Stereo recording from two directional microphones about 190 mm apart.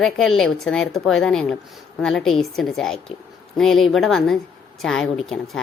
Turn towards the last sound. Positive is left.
turn(degrees=0)  # may be behind; listen again after turning